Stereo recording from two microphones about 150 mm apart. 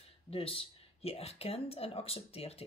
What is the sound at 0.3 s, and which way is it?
Speech, 40° left (ahead or behind).